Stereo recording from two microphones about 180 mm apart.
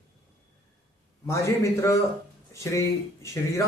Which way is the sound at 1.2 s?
15° left (ahead or behind).